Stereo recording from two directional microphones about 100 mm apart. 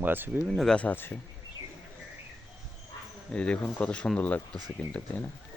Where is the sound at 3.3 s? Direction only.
10° left (ahead or behind).